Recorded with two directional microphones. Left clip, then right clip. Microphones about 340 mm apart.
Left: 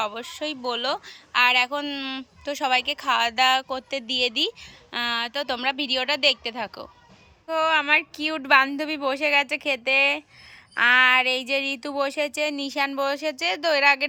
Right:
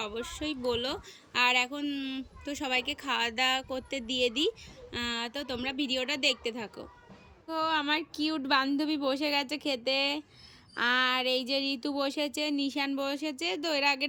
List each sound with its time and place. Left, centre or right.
0.0 s speech: centre